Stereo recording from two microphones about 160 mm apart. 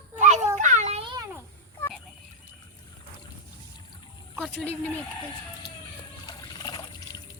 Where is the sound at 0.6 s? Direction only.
50° right (ahead or behind).